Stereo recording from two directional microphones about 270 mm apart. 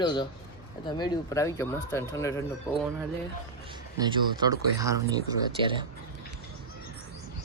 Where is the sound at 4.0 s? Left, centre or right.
Centre.